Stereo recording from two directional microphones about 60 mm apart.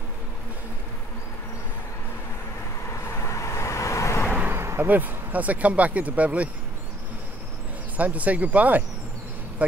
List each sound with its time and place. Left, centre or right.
2.9 s vehicle: left
4.6 s a sound: right
4.8 s speech: right
8.0 s speech: right